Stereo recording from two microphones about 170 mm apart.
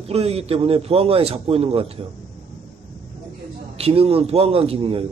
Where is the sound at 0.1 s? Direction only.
35° right (ahead or behind).